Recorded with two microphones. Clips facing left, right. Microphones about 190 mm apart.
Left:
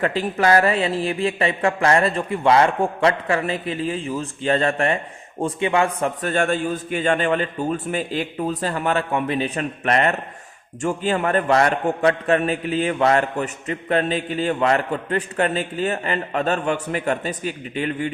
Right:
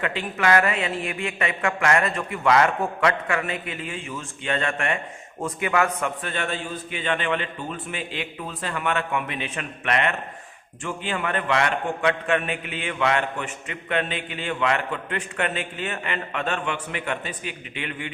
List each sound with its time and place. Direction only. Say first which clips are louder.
0.0 s a man's voice: left 5 dB; 35° left (ahead or behind)
6.2 s a man's voice: left 8 dB; 45° left (ahead or behind)